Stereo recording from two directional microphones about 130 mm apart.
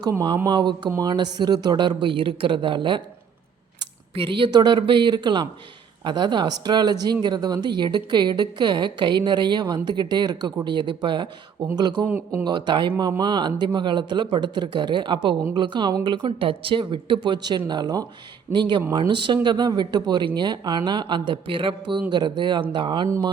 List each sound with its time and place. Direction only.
0.0 s speech: 30° right (ahead or behind)
4.1 s speech: 40° right (ahead or behind)
12.0 s a man's voice: 15° right (ahead or behind)
12.5 s speech: 35° right (ahead or behind)